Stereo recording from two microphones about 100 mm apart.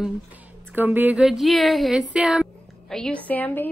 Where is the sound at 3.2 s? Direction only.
15° left (ahead or behind).